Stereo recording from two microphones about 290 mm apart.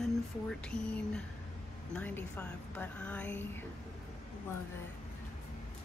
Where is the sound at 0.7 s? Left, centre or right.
Centre.